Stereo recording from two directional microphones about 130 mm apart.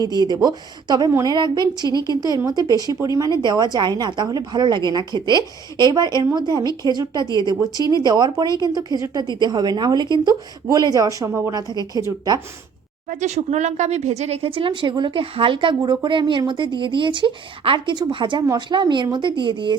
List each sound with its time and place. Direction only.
0.0 s a woman's voice: 30° right (ahead or behind)
13.1 s a woman's voice: 65° right (ahead or behind); by 19.7 s 40° right (ahead or behind)